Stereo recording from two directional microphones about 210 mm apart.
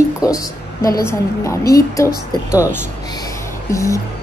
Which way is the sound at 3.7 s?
15° left (ahead or behind).